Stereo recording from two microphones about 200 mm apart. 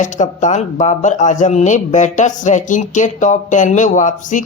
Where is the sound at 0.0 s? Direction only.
40° left (ahead or behind).